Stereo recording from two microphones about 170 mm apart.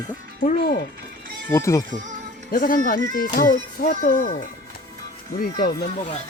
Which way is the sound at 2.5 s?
55° left (ahead or behind).